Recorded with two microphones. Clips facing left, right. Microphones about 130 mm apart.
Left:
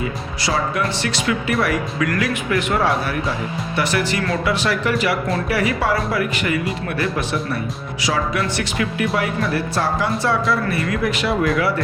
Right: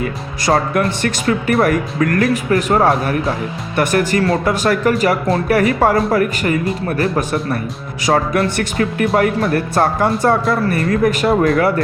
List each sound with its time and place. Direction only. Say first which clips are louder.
0.0 s speech: right 4 dB; 55° right (ahead or behind)